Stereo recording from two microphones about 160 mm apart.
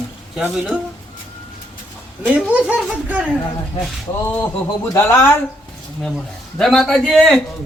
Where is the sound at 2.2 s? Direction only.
5° right (ahead or behind).